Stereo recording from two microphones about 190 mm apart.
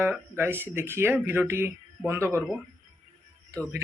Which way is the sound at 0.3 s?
10° right (ahead or behind).